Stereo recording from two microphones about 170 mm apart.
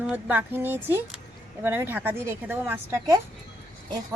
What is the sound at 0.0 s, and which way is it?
A woman's voice, 10° right (ahead or behind).